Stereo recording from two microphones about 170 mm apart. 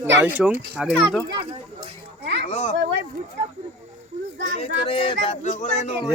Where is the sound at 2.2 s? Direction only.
80° right.